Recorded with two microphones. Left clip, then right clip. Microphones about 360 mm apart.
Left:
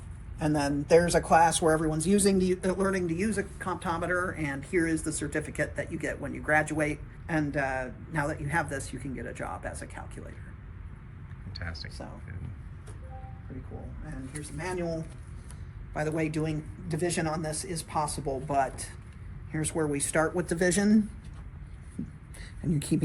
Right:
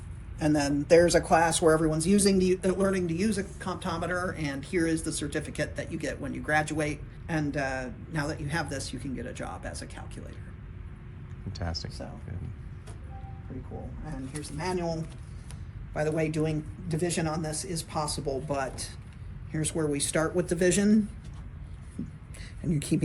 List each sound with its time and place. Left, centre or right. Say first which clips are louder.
0.3 s speech: right 2 dB; centre
2.3 s speech: right 2 dB; centre
11.5 s speech: right 3 dB; centre
14.0 s speech: right 2 dB; centre
22.8 s speech: right 1 dB; centre